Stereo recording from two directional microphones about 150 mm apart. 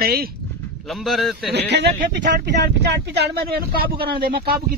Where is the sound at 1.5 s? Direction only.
90° right.